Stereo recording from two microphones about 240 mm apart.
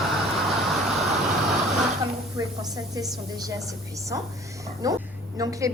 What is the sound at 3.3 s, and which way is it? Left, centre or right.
A woman's voice, centre.